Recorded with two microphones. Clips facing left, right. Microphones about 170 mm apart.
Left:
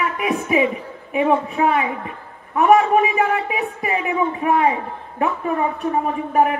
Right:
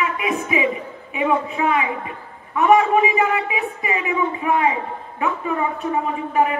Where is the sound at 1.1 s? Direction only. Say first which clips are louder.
Left 3 dB; 50° left (ahead or behind).